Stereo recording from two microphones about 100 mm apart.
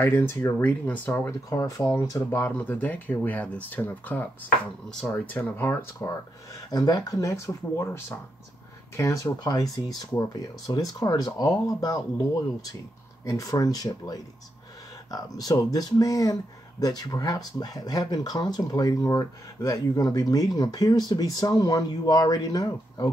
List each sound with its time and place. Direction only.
0.0 s speech: 25° left (ahead or behind)
1.5 s speech: 35° left (ahead or behind)
2.4 s speech: 20° left (ahead or behind)
6.7 s speech: 45° left (ahead or behind)
9.4 s speech: 45° left (ahead or behind)